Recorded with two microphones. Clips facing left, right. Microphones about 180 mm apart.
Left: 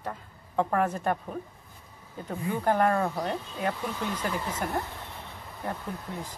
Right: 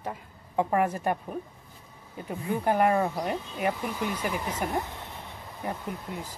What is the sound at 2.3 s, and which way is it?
A woman's voice, 10° right (ahead or behind).